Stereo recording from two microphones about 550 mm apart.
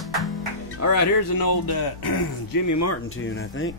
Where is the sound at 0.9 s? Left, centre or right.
Left.